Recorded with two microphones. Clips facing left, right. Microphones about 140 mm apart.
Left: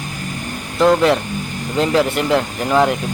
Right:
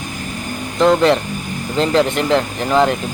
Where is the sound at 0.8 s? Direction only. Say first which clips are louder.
Right 1 dB; 5° left (ahead or behind).